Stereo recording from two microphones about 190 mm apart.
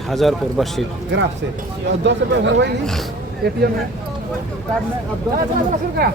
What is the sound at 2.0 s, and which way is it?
Speech, 70° right (ahead or behind).